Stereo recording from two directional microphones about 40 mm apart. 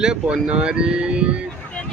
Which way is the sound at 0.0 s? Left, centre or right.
Right.